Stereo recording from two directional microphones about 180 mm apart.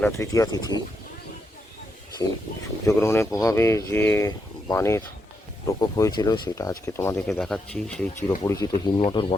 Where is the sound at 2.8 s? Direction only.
15° left (ahead or behind).